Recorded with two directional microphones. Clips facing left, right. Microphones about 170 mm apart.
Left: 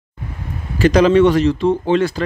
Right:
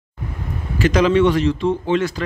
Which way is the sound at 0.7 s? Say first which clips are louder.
Left 4 dB; 35° left (ahead or behind).